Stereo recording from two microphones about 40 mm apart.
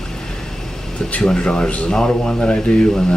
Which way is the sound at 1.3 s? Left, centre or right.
Left.